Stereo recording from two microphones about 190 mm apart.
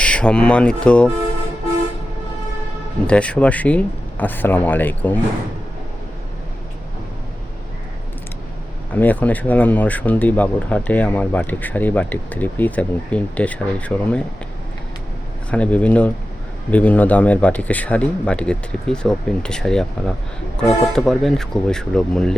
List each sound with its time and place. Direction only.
0.0 s speech: 5° left (ahead or behind)
3.1 s speech: 5° left (ahead or behind)
9.0 s speech: 10° left (ahead or behind)
15.4 s speech: 5° left (ahead or behind)